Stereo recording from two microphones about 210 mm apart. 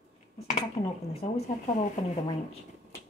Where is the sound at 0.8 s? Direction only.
30° left (ahead or behind).